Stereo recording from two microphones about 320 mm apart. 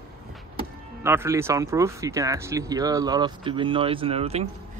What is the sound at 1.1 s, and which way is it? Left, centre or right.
Speech, centre.